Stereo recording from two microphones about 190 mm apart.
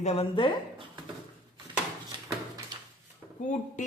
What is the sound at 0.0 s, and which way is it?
Speech, 35° left (ahead or behind).